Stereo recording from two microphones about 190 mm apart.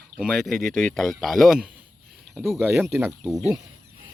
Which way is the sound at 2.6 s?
10° right (ahead or behind).